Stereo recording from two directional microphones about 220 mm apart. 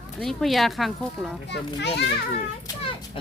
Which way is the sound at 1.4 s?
50° left (ahead or behind).